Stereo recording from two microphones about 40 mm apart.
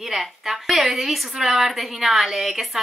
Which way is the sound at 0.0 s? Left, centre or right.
Centre.